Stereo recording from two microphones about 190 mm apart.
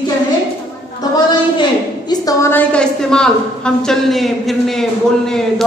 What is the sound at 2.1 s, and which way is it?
A woman's voice, 15° left (ahead or behind).